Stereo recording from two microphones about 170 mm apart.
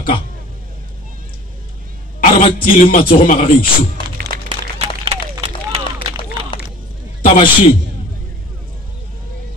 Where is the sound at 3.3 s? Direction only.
55° left (ahead or behind).